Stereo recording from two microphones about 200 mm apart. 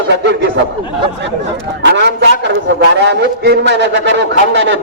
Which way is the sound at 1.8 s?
55° right (ahead or behind).